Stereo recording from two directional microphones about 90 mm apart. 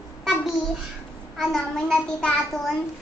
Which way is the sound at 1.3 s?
10° left (ahead or behind).